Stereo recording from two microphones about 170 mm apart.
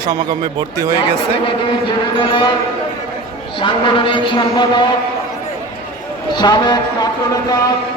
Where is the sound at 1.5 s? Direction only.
30° left (ahead or behind).